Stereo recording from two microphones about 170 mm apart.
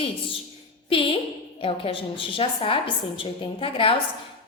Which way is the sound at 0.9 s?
30° left (ahead or behind).